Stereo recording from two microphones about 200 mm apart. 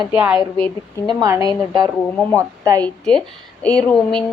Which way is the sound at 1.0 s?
20° right (ahead or behind).